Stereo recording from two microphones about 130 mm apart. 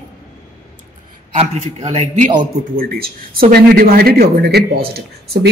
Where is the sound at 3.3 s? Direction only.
90° right.